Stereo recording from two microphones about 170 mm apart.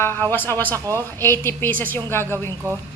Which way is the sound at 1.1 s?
15° left (ahead or behind).